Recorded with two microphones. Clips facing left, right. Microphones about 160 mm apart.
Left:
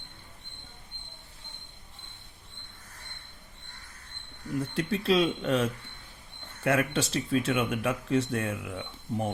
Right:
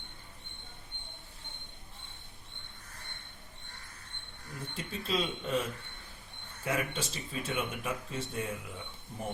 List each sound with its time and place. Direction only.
4.7 s speech: 75° left (ahead or behind)
6.7 s speech: 80° left